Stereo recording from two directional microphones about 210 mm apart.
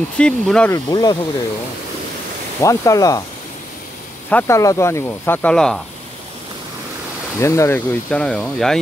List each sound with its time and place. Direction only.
0.2 s speech: 5° left (ahead or behind)
0.8 s speech: 20° left (ahead or behind)
2.6 s speech: 15° left (ahead or behind)
4.3 s speech: 10° left (ahead or behind)
7.3 s speech: 15° left (ahead or behind)